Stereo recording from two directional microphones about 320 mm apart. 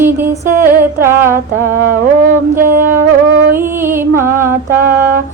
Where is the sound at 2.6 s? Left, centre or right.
Right.